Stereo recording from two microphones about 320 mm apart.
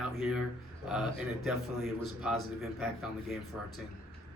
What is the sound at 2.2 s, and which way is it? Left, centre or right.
Speech, centre.